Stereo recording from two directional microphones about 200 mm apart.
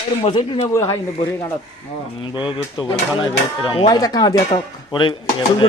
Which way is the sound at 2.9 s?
25° left (ahead or behind).